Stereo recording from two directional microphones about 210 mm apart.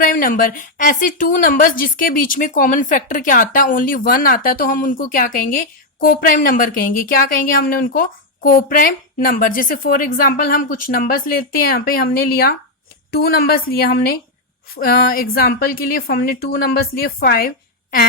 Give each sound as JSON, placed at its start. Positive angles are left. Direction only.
{"t": 0.0, "sound": "a woman's voice", "side_deg": 40}